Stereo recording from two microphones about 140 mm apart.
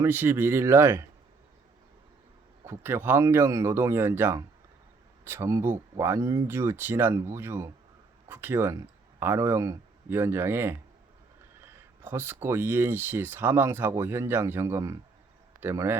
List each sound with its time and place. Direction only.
0.0 s speech: 15° right (ahead or behind)
2.6 s speech: 15° right (ahead or behind)